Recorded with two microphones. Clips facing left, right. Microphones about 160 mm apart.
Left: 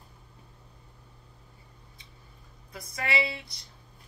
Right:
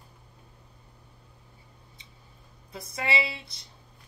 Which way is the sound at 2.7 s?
25° right (ahead or behind).